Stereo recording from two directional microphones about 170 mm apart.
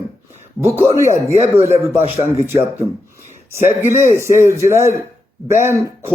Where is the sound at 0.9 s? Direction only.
15° right (ahead or behind).